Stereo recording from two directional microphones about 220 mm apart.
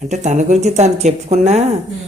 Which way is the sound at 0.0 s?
30° right (ahead or behind).